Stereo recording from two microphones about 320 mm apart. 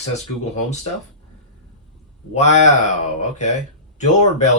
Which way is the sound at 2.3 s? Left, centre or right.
Left.